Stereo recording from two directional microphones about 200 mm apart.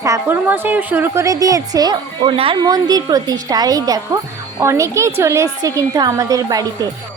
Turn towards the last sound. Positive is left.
turn(degrees=-15)  # may be behind; listen again after turning